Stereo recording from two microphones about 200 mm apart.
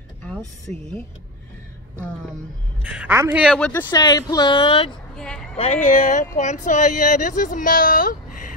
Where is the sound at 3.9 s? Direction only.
20° left (ahead or behind).